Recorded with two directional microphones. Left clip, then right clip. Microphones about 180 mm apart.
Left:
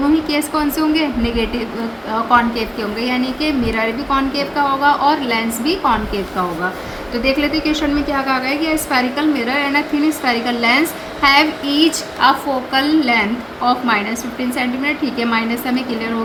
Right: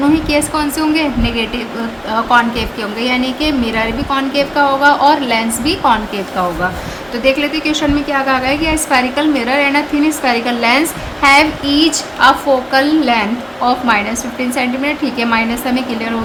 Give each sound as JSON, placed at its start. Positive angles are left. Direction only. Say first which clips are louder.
{"t": 0.3, "sound": "a woman's voice", "louder": "right 3 dB", "side_deg": -25}